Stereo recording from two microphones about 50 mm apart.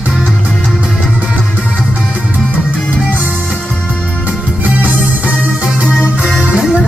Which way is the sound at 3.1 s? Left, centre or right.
Right.